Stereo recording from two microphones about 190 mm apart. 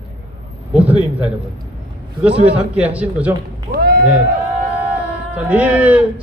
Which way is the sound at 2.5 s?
5° right (ahead or behind).